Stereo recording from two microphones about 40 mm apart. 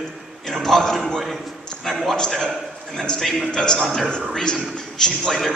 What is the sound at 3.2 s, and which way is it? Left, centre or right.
Speech, centre.